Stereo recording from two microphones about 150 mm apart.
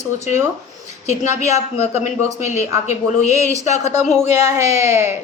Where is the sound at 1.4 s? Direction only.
50° left (ahead or behind).